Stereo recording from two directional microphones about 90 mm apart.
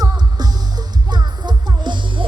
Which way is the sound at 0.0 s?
50° right (ahead or behind).